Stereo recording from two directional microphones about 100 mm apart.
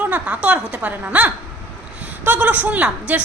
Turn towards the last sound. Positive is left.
turn(degrees=-15)  # may be behind; listen again after turning